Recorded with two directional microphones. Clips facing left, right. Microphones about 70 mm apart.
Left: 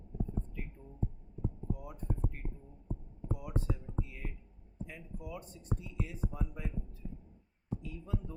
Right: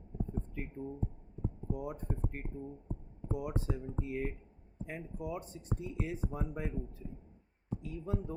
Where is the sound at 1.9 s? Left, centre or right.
Right.